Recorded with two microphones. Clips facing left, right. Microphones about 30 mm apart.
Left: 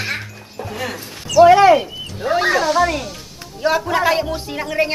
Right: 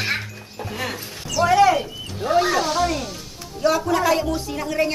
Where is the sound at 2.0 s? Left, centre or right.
Centre.